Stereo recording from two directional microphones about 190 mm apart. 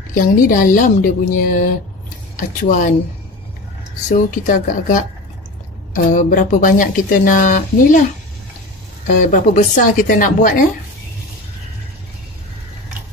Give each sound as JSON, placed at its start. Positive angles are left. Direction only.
{"t": 0.1, "sound": "speech", "side_deg": 45}
{"t": 4.1, "sound": "speech", "side_deg": 40}
{"t": 6.0, "sound": "speech", "side_deg": 45}
{"t": 9.0, "sound": "speech", "side_deg": 45}